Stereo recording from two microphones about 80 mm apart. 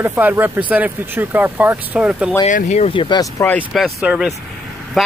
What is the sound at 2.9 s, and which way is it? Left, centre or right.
Speech, left.